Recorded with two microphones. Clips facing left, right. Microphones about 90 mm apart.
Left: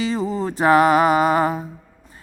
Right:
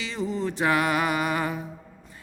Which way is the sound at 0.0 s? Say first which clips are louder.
Left 6 dB; 40° left (ahead or behind).